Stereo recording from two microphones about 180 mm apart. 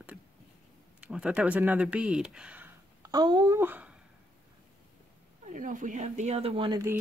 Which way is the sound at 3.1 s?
25° right (ahead or behind).